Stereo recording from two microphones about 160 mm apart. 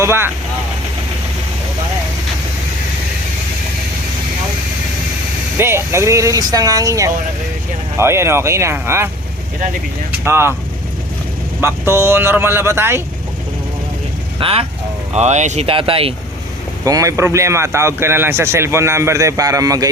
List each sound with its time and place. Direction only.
0.0 s speech: 15° right (ahead or behind)
5.5 s speech: 15° right (ahead or behind)
10.1 s speech: 15° right (ahead or behind)
11.6 s speech: 15° right (ahead or behind)
14.3 s speech: 35° right (ahead or behind)
16.8 s speech: 20° right (ahead or behind)